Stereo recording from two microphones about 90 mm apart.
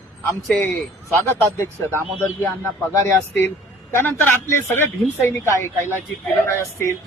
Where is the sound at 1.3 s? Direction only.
25° left (ahead or behind).